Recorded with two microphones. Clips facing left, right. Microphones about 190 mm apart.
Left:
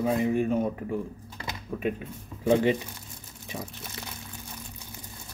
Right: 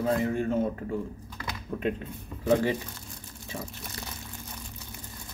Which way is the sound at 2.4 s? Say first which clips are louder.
Left 2 dB; 20° left (ahead or behind).